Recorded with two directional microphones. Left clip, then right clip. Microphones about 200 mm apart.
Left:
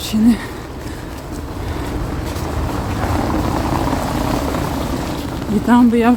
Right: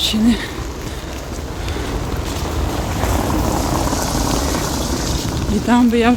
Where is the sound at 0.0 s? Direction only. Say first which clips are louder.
Even; 15° left (ahead or behind).